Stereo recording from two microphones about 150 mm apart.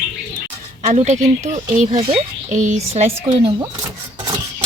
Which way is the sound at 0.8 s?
50° right (ahead or behind).